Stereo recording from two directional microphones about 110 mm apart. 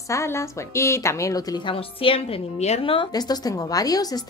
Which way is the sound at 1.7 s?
55° left (ahead or behind).